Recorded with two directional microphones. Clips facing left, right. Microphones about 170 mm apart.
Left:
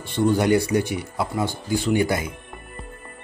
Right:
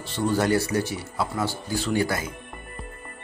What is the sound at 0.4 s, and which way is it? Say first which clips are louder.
Speech: left 3 dB; 15° left (ahead or behind).